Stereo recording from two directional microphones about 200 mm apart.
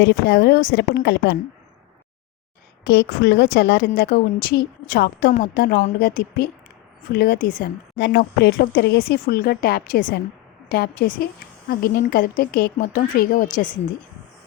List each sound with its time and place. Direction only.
0.0 s speech: 55° left (ahead or behind)
2.8 s a woman's voice: 55° left (ahead or behind)